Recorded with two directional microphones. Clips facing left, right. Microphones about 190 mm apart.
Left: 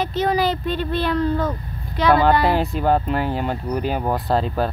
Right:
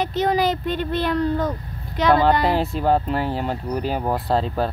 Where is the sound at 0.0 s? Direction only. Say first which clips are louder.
Even; 20° right (ahead or behind).